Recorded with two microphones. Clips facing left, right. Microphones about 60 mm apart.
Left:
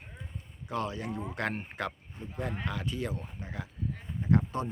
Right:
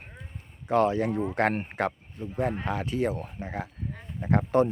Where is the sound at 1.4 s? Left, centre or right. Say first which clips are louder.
Right 8 dB; right.